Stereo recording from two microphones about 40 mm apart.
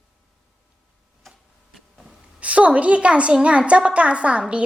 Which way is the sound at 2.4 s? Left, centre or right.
Right.